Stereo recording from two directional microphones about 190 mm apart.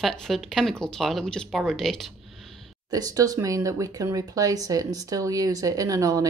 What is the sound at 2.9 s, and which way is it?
Speech, 20° right (ahead or behind).